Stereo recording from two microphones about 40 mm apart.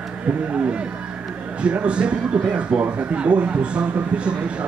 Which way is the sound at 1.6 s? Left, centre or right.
Right.